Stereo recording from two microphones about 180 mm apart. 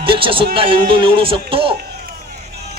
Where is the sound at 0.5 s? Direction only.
30° right (ahead or behind).